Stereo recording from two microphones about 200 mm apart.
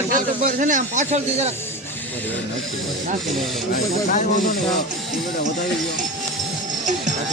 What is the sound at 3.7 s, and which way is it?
Speech, 45° left (ahead or behind).